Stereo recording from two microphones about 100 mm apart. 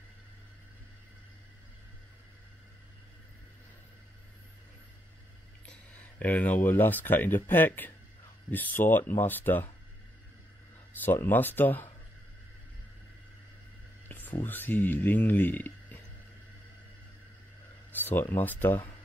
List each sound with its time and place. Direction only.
5.7 s speech: 15° left (ahead or behind)
10.9 s speech: 20° left (ahead or behind)
14.0 s music: 20° left (ahead or behind)
14.4 s speech: 20° left (ahead or behind)
17.9 s a sound: 20° left (ahead or behind)
18.3 s speech: 20° left (ahead or behind)